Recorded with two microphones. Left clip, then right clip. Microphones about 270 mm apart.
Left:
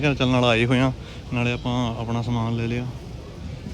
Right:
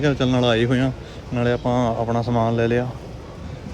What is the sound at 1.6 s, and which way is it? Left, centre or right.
Speech, centre.